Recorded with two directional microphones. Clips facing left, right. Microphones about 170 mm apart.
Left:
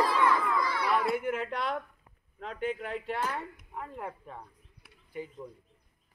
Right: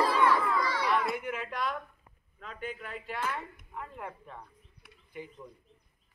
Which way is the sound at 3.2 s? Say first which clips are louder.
Left 2 dB; 40° left (ahead or behind).